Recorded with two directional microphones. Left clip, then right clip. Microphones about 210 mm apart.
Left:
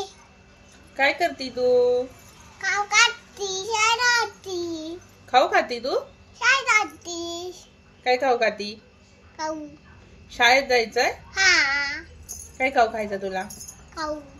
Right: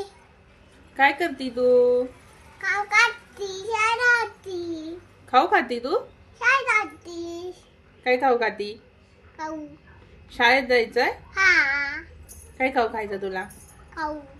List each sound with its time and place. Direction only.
0.9 s speech: 15° right (ahead or behind)
2.6 s child singing: centre (ahead or behind)
5.3 s speech: 15° right (ahead or behind)
6.4 s a child's voice: 5° right (ahead or behind)
8.0 s speech: 10° right (ahead or behind)
10.3 s speech: 10° right (ahead or behind)
11.3 s speech: centre (ahead or behind)
12.5 s speech: 10° right (ahead or behind)